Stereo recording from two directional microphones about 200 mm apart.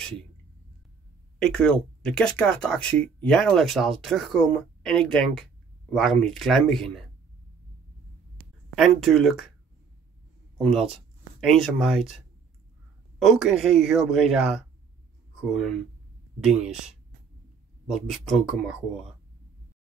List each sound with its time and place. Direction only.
1.4 s speech: 5° left (ahead or behind)
8.7 s speech: centre (ahead or behind)
10.6 s speech: centre (ahead or behind)
13.2 s speech: centre (ahead or behind)